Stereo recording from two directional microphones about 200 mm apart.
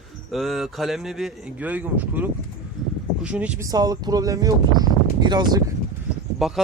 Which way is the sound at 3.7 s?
20° right (ahead or behind).